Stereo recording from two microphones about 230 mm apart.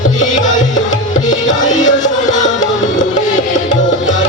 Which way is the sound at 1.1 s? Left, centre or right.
Left.